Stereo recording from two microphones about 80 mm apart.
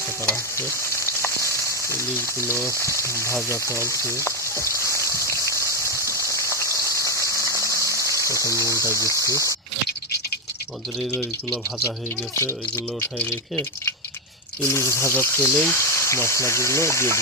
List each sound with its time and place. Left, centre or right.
0.3 s frying: left
8.6 s speech: right
8.9 s speech: left
11.8 s speech: left